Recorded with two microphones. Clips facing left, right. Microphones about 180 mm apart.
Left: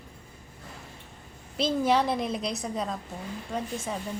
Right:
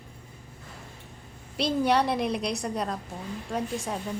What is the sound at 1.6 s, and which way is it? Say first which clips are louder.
Speech: even; centre (ahead or behind).